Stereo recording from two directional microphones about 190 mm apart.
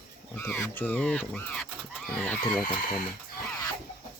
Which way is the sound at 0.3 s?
10° left (ahead or behind).